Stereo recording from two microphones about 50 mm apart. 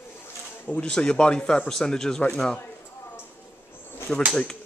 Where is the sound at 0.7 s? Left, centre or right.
Centre.